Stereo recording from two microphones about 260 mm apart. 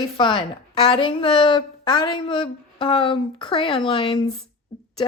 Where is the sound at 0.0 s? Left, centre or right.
Centre.